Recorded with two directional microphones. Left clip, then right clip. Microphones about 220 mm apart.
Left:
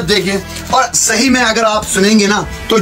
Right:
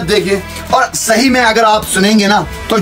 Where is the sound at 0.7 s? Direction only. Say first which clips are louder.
Right 1 dB; 45° right (ahead or behind).